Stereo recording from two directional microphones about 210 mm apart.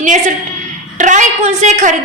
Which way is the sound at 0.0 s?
35° right (ahead or behind).